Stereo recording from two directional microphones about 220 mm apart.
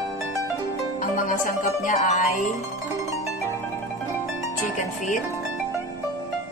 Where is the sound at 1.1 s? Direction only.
35° left (ahead or behind).